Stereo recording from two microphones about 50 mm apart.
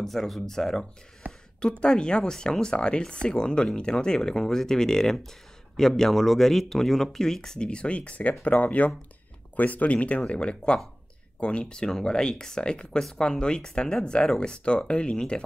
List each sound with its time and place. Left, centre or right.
0.0 s speech: centre